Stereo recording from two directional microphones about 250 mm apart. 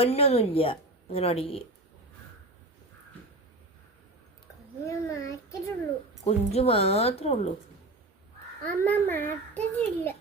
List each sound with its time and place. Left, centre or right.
0.0 s a woman's voice: left
4.9 s a child's voice: centre
6.2 s a woman's voice: left
8.6 s a child's voice: centre